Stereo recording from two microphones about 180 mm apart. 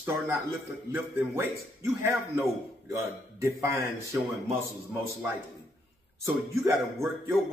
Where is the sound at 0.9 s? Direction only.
15° right (ahead or behind).